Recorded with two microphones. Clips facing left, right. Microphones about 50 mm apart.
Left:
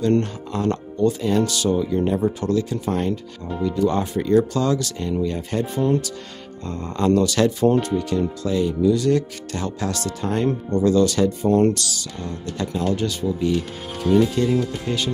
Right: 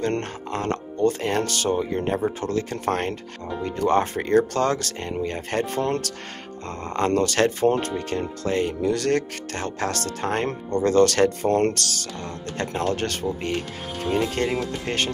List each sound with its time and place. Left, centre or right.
0.0 s speech: right